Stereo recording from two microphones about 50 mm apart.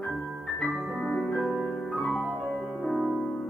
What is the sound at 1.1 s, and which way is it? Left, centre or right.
Piano, centre.